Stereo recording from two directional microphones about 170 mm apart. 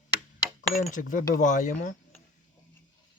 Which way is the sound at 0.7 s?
55° left (ahead or behind).